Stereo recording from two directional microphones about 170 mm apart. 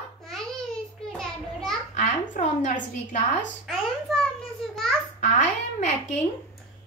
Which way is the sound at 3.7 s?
Centre (ahead or behind).